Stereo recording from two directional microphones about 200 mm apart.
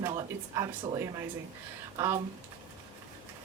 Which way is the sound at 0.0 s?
20° right (ahead or behind).